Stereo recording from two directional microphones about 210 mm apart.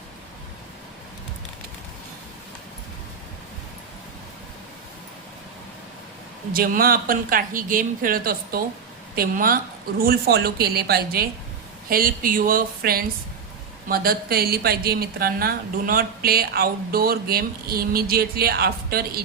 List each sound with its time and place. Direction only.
6.5 s a woman's voice: 45° right (ahead or behind)